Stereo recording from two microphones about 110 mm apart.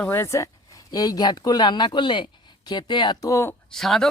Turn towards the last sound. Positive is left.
turn(degrees=5)  # may be behind; listen again after turning